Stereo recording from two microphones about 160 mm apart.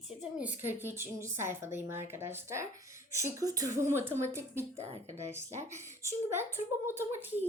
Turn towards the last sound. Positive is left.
turn(degrees=-10)  # may be behind; listen again after turning